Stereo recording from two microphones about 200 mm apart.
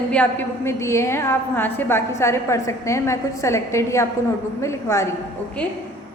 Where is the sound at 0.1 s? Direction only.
10° left (ahead or behind).